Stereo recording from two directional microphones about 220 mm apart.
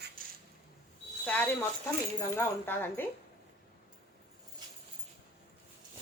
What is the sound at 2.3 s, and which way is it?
Speech, 10° left (ahead or behind).